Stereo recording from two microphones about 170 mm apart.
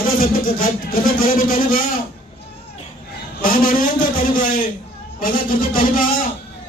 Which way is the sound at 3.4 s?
55° left (ahead or behind).